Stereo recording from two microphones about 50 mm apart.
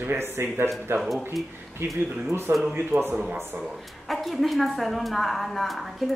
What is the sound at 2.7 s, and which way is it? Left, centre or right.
Speech, right.